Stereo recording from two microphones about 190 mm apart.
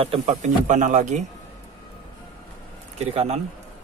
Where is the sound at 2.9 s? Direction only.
35° right (ahead or behind).